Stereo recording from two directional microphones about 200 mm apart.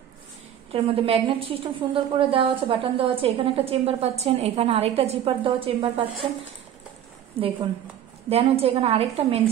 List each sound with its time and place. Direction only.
0.7 s a woman's voice: 30° right (ahead or behind)
7.3 s a woman's voice: 30° right (ahead or behind)